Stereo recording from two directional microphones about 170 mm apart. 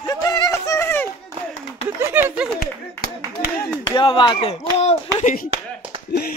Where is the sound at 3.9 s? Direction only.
30° left (ahead or behind).